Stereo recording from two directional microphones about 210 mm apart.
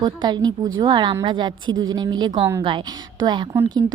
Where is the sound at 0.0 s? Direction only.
20° right (ahead or behind).